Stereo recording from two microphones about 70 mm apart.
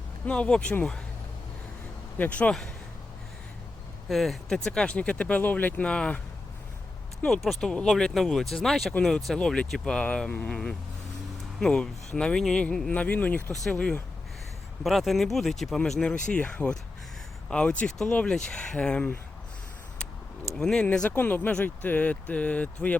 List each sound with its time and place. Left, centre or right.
0.3 s speech: centre
2.1 s speech: left
4.1 s speech: centre
7.4 s speech: centre; by 10.6 s left
11.6 s speech: centre
12.9 s speech: left
14.8 s speech: centre
20.6 s speech: centre
21.2 s speech: left